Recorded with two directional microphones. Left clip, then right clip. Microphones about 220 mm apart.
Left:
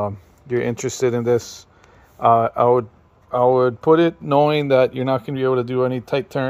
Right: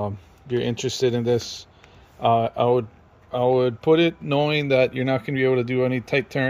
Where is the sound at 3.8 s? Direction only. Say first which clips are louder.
Left 3 dB; 10° left (ahead or behind).